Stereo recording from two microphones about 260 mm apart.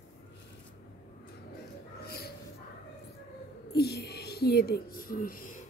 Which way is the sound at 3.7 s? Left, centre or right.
Left.